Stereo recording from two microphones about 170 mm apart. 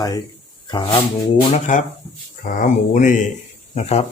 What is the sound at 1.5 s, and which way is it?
Speech, 50° left (ahead or behind).